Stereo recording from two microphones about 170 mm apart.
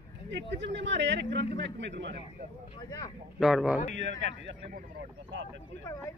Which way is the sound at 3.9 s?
90° right.